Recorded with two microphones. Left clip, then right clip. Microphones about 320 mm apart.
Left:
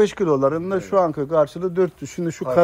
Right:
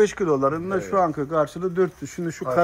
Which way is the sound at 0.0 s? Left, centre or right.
Left.